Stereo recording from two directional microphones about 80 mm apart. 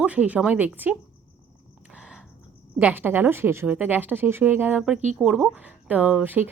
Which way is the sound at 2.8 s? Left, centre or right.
Right.